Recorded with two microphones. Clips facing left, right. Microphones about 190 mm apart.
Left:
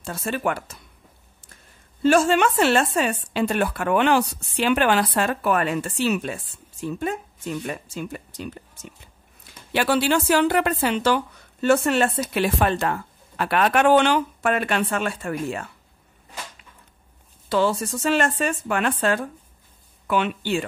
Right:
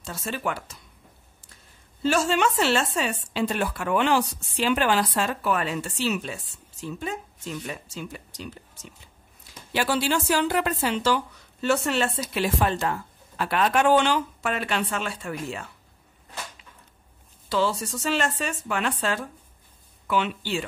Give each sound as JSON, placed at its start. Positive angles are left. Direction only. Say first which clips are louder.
{"t": 0.0, "sound": "a woman's voice", "louder": "left 5 dB", "side_deg": 55}
{"t": 2.0, "sound": "a woman's voice", "louder": "left 5 dB", "side_deg": 55}
{"t": 9.7, "sound": "a woman's voice", "louder": "left 4 dB", "side_deg": 60}
{"t": 17.5, "sound": "a woman's voice", "louder": "left 4 dB", "side_deg": 55}